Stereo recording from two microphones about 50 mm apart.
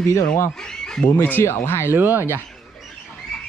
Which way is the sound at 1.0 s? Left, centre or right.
Left.